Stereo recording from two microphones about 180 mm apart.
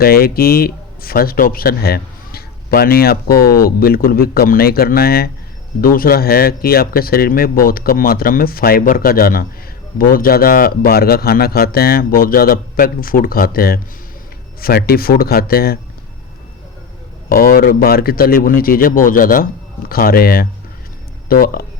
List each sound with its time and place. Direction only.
0.0 s speech: 55° left (ahead or behind)
3.3 s speech: 15° left (ahead or behind)
3.6 s a man's voice: 55° left (ahead or behind)
17.2 s a man's voice: 55° left (ahead or behind)